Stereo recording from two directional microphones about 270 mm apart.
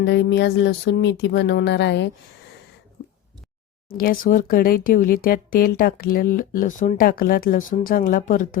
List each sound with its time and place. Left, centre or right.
0.0 s speech: left
3.9 s speech: left